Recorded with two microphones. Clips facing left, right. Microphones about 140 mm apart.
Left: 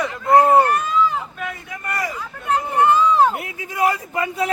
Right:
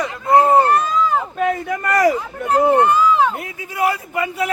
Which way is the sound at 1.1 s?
45° right (ahead or behind).